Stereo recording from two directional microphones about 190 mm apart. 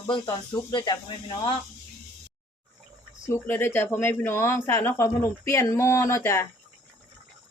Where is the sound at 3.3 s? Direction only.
10° left (ahead or behind).